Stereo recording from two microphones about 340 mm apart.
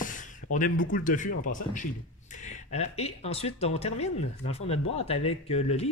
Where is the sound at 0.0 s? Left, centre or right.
Left.